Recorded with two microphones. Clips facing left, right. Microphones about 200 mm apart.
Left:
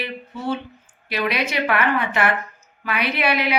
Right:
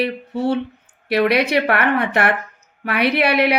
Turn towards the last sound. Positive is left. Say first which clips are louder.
# right 6 dB
turn(degrees=-65)  # may be behind; listen again after turning